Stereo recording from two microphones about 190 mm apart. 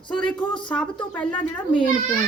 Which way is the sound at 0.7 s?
5° left (ahead or behind).